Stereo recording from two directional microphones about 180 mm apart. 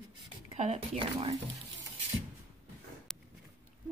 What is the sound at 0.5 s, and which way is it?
Speech, 35° right (ahead or behind).